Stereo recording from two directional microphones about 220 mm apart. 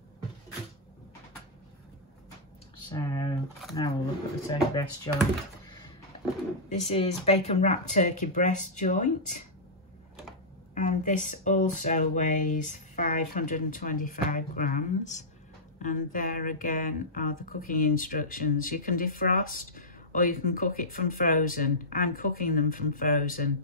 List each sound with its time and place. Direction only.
2.9 s speech: 15° left (ahead or behind)
4.5 s speech: 15° left (ahead or behind)
6.7 s speech: 30° left (ahead or behind)
10.7 s speech: 35° left (ahead or behind)